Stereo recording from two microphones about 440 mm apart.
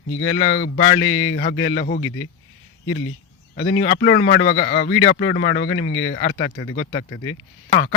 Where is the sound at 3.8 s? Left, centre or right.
Left.